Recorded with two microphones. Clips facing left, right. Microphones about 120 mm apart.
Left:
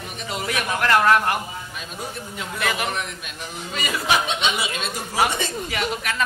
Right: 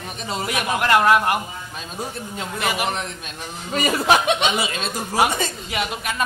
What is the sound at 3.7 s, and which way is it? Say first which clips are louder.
Speech: right 5 dB; 45° right (ahead or behind).